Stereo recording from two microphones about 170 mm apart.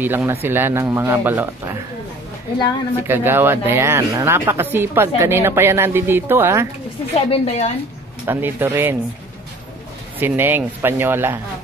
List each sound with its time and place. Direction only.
0.0 s speech: 10° right (ahead or behind)
3.0 s speech: 15° right (ahead or behind)
7.2 s a woman's voice: 40° left (ahead or behind)
8.3 s speech: 10° right (ahead or behind)
10.1 s speech: 10° right (ahead or behind)